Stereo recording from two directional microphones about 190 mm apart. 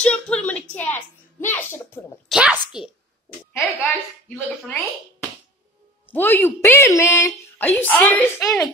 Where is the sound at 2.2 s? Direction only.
5° right (ahead or behind).